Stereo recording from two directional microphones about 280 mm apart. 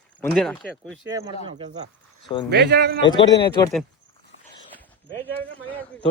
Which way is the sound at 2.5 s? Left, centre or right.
Right.